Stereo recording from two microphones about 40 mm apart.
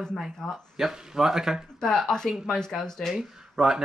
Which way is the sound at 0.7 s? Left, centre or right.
Centre.